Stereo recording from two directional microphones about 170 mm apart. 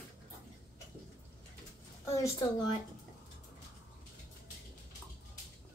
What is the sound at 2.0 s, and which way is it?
Speech, 20° left (ahead or behind).